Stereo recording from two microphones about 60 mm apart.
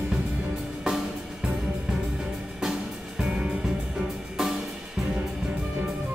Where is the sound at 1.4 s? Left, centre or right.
Centre.